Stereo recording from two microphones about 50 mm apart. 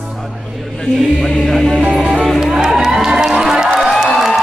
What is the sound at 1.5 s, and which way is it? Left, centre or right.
Music, centre.